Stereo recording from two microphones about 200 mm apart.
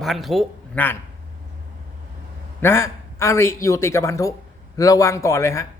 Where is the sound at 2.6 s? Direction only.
15° left (ahead or behind).